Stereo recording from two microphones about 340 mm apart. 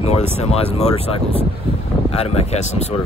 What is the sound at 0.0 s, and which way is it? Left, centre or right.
Speech, centre.